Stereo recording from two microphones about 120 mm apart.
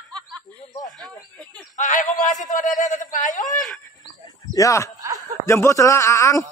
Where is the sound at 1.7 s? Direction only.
90° left.